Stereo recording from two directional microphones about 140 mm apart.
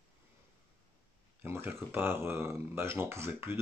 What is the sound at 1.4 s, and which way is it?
Speech, 15° right (ahead or behind).